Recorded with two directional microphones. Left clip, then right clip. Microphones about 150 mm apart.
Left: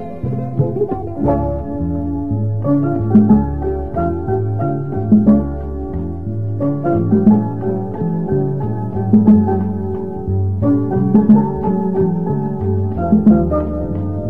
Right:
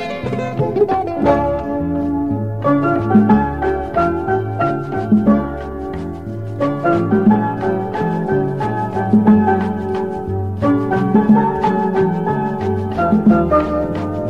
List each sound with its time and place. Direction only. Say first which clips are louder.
0.6 s music: right 4 dB; 25° right (ahead or behind)
2.6 s music: right 3 dB; 30° right (ahead or behind)
6.7 s music: right 1 dB; 30° right (ahead or behind)